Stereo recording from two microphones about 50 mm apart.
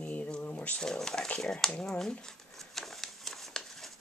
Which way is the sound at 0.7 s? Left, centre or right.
Centre.